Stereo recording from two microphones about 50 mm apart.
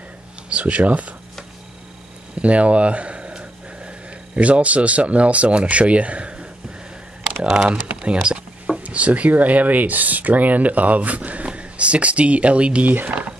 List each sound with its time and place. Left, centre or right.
0.6 s speech: right
2.3 s a sound: right
4.4 s speech: right
7.4 s speech: centre
12.8 s speech: right